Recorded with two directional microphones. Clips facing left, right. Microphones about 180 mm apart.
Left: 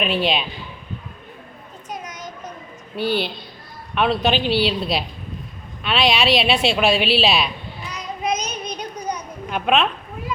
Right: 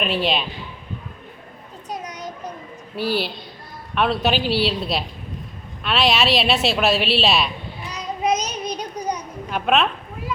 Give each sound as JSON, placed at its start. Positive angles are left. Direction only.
{"t": 0.0, "sound": "a woman's voice", "side_deg": 0}
{"t": 1.9, "sound": "a sound", "side_deg": -35}
{"t": 2.9, "sound": "a woman's voice", "side_deg": 0}
{"t": 7.9, "sound": "child singing", "side_deg": -35}
{"t": 9.5, "sound": "a woman's voice", "side_deg": 0}